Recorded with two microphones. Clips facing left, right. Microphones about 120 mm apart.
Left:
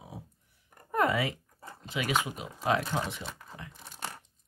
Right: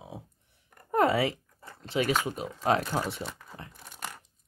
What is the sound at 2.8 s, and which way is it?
Speech, 5° right (ahead or behind).